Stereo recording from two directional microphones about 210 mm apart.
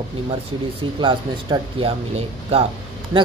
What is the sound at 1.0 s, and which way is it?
Speech, 20° right (ahead or behind).